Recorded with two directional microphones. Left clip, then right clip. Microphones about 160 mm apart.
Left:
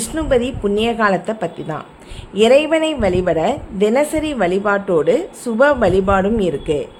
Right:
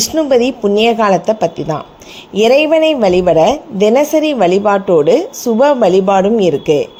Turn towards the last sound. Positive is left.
turn(degrees=-25)  # may be behind; listen again after turning